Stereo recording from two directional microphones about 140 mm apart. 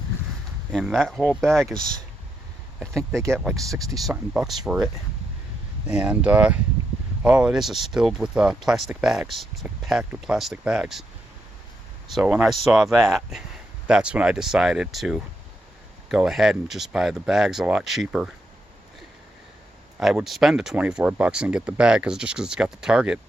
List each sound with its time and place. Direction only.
0.7 s speech: centre (ahead or behind)
3.1 s speech: 20° right (ahead or behind)
3.9 s speech: 5° right (ahead or behind)
5.9 s speech: 10° right (ahead or behind)
12.1 s speech: 5° right (ahead or behind)
20.0 s speech: centre (ahead or behind)